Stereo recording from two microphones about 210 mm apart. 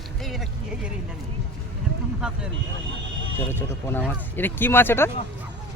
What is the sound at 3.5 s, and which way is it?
Speech, 10° left (ahead or behind).